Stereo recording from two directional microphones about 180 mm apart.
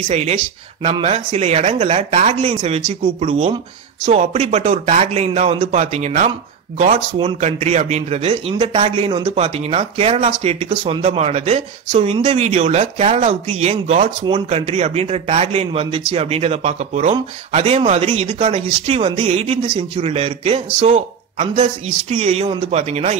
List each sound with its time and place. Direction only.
0.1 s a man's voice: 35° right (ahead or behind)